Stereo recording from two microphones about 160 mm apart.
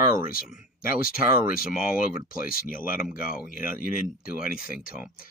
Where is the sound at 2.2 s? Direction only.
65° left (ahead or behind).